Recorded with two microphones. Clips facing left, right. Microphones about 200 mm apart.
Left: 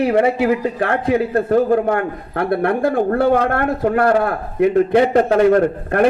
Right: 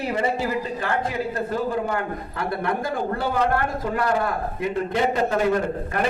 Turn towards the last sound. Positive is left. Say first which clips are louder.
# left 9 dB
turn(degrees=60)  # may be behind; listen again after turning